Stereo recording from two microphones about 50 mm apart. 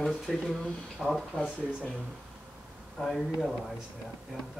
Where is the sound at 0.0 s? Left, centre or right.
Centre.